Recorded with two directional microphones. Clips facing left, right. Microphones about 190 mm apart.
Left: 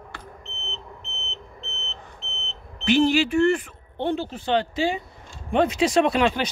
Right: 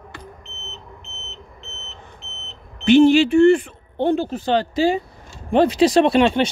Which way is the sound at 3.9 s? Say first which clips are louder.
Right 6 dB; 45° right (ahead or behind).